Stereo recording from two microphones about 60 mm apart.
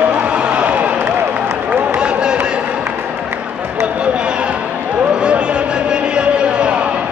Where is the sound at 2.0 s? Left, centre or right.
Centre.